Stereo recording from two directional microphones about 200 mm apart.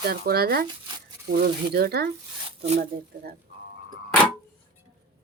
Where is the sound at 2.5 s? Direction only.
30° right (ahead or behind).